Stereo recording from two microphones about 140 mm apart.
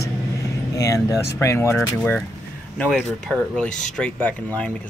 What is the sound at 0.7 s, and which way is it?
Speech, 25° left (ahead or behind).